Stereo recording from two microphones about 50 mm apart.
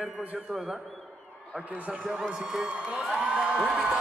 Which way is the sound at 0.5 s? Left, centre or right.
Centre.